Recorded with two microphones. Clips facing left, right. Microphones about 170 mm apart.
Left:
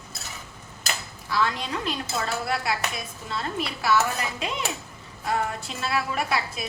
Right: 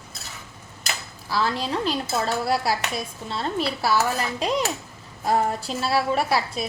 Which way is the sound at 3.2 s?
30° right (ahead or behind).